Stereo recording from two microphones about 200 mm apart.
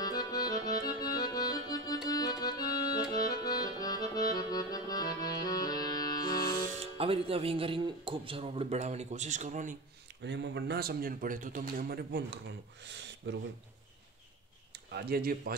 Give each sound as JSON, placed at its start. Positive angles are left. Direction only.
{"t": 0.2, "sound": "accordion", "side_deg": 20}
{"t": 5.3, "sound": "music", "side_deg": 20}
{"t": 6.8, "sound": "speech", "side_deg": -30}
{"t": 10.2, "sound": "a man's voice", "side_deg": -60}
{"t": 14.7, "sound": "speech", "side_deg": -55}